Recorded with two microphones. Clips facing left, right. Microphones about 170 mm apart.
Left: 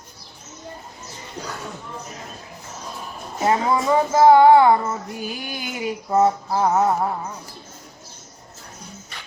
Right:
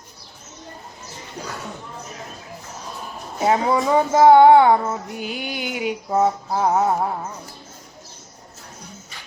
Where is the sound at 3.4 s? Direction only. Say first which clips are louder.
Right 1 dB; 10° right (ahead or behind).